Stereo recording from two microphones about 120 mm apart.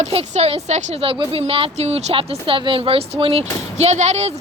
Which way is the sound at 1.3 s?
50° right (ahead or behind).